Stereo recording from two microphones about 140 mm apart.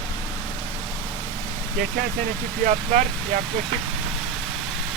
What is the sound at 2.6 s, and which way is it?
Speech, 70° right (ahead or behind).